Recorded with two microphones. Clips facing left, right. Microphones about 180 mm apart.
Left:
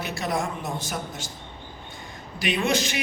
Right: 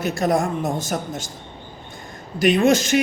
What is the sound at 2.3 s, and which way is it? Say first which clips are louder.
Speech: right 8 dB; 45° right (ahead or behind).